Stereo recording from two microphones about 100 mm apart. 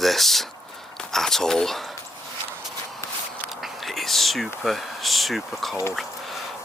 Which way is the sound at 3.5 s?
Centre (ahead or behind).